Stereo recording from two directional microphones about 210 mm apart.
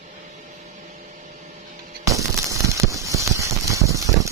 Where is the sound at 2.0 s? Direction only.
15° right (ahead or behind).